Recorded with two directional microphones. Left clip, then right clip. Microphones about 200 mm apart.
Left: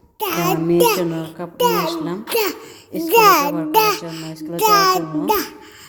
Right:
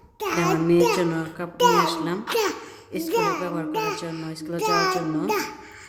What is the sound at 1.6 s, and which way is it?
Speech, 20° left (ahead or behind).